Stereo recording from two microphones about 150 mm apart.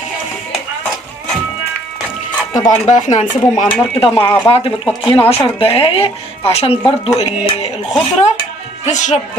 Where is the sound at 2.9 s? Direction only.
55° left (ahead or behind).